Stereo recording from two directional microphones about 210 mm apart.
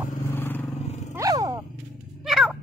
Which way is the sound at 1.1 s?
15° right (ahead or behind).